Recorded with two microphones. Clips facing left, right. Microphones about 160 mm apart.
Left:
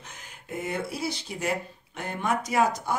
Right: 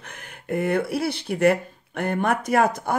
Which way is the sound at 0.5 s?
60° right (ahead or behind).